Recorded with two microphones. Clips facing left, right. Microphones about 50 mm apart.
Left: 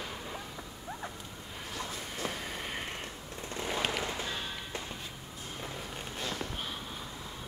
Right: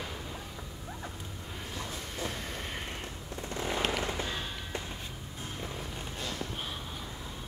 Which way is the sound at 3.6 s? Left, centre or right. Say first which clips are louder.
Right 1 dB; centre.